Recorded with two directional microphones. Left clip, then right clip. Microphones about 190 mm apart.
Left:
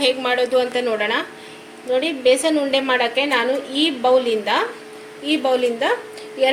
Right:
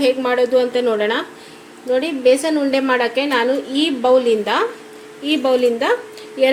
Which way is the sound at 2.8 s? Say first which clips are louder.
Right 1 dB; 40° right (ahead or behind).